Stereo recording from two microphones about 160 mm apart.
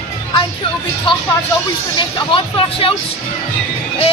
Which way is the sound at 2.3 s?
35° left (ahead or behind).